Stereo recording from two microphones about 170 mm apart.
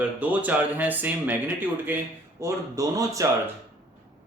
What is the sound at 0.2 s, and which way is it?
Speech, 10° right (ahead or behind).